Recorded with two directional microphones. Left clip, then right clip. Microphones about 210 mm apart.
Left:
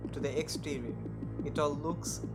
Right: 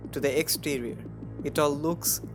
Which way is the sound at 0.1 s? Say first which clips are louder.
Right 10 dB; 35° right (ahead or behind).